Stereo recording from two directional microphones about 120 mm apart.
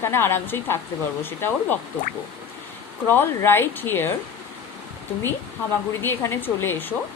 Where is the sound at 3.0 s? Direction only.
15° left (ahead or behind).